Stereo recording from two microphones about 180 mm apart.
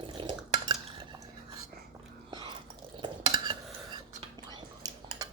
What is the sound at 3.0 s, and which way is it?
Cutlery, 25° right (ahead or behind).